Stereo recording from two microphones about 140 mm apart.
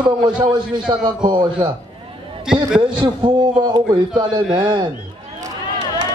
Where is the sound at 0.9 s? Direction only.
30° right (ahead or behind).